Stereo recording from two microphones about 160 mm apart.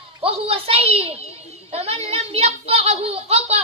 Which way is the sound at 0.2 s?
35° right (ahead or behind).